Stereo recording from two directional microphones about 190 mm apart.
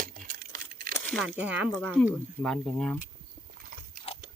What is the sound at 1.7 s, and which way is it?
Speech, 5° left (ahead or behind).